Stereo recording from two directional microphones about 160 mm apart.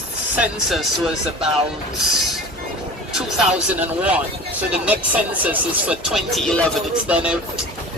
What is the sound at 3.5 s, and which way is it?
Speech, 10° right (ahead or behind).